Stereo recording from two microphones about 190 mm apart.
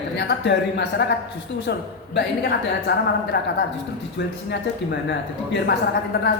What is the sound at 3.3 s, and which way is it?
Speech, 55° left (ahead or behind).